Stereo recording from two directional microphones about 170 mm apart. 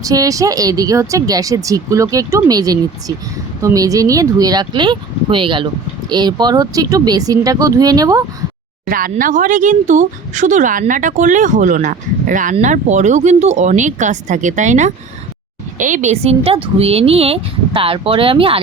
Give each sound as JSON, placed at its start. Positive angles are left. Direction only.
{"t": 0.0, "sound": "speech", "side_deg": -20}
{"t": 8.9, "sound": "speech", "side_deg": -55}